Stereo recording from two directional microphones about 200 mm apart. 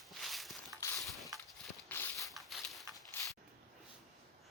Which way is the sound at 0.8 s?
15° left (ahead or behind).